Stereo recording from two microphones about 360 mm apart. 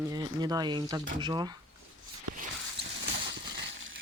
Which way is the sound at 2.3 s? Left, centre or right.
Right.